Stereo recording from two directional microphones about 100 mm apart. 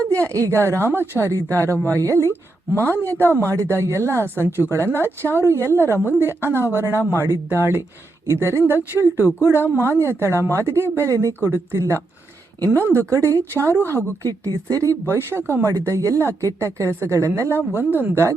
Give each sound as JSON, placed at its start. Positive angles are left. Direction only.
{"t": 0.0, "sound": "a woman's voice", "side_deg": -30}